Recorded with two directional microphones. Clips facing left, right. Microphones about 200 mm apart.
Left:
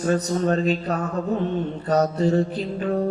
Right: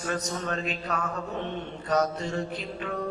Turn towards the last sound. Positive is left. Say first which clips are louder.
# left 9 dB
turn(degrees=35)  # may be behind; listen again after turning